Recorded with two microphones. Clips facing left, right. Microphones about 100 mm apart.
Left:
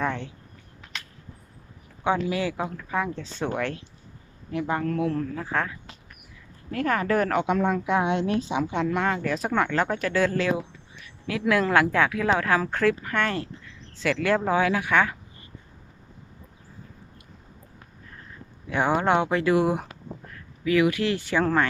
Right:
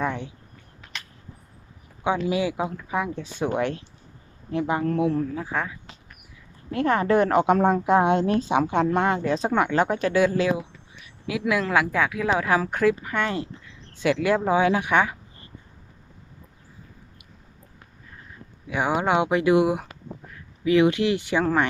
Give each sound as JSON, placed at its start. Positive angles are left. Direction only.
{"t": 0.0, "sound": "a sound", "side_deg": -10}
{"t": 2.2, "sound": "speech", "side_deg": -15}
{"t": 6.7, "sound": "speech", "side_deg": -25}
{"t": 7.4, "sound": "a woman's voice", "side_deg": -45}
{"t": 8.8, "sound": "speech", "side_deg": -30}
{"t": 9.5, "sound": "speech", "side_deg": -15}
{"t": 11.0, "sound": "a sound", "side_deg": -10}
{"t": 11.6, "sound": "speech", "side_deg": -5}
{"t": 18.7, "sound": "speech", "side_deg": -10}